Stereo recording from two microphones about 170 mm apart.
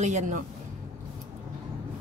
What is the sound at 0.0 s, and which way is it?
Speech, 45° right (ahead or behind).